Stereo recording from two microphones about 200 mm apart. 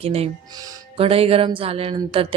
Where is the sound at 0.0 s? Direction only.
30° right (ahead or behind).